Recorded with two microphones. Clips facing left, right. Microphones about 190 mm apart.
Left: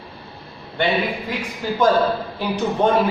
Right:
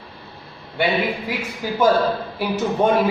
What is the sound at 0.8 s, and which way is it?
A man's voice, 5° right (ahead or behind).